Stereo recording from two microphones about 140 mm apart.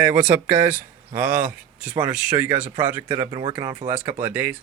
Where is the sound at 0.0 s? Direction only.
15° right (ahead or behind).